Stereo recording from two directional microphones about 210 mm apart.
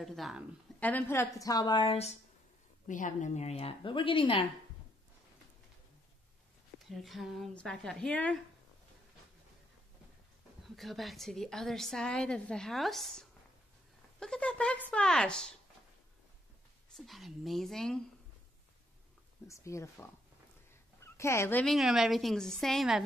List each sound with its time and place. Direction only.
0.0 s a woman's voice: centre (ahead or behind); by 4.5 s 25° left (ahead or behind)
6.9 s a woman's voice: centre (ahead or behind)
10.8 s a woman's voice: centre (ahead or behind)
16.9 s a woman's voice: centre (ahead or behind)
19.4 s a woman's voice: 15° left (ahead or behind)